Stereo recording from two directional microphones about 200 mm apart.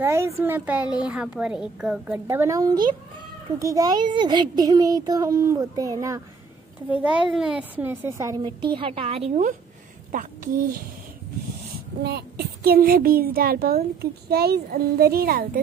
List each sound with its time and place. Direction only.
0.0 s a child's voice: 10° right (ahead or behind); by 10.8 s 45° right (ahead or behind)
12.0 s a child's voice: 50° right (ahead or behind)